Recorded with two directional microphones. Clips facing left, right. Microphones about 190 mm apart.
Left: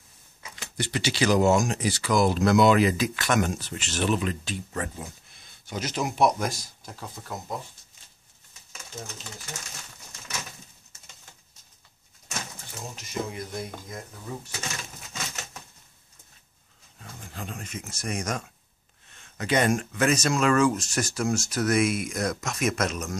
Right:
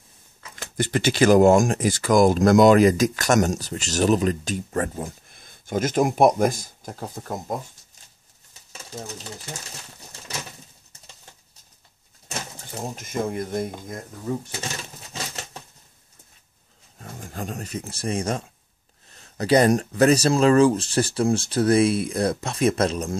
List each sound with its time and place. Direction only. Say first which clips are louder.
0.6 s speech: right 6 dB; 50° right (ahead or behind)
8.9 s speech: right 4 dB; 35° right (ahead or behind)
9.9 s bird: right 3 dB; 35° right (ahead or behind)
12.8 s speech: right 6 dB; 50° right (ahead or behind)
15.1 s bird flight: right 3 dB; 30° right (ahead or behind)
17.0 s speech: right 6 dB; 45° right (ahead or behind)